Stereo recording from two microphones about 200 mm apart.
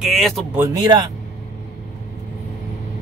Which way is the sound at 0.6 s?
20° right (ahead or behind).